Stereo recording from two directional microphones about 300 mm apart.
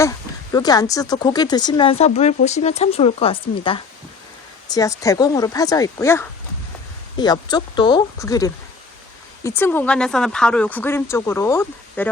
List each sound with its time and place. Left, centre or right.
0.5 s a woman's voice: centre